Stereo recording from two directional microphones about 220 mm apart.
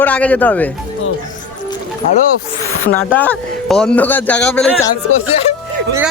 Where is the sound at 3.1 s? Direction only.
5° left (ahead or behind).